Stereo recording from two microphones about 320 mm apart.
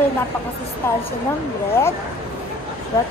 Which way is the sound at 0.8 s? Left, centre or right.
Centre.